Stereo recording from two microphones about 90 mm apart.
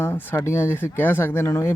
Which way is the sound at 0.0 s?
20° left (ahead or behind).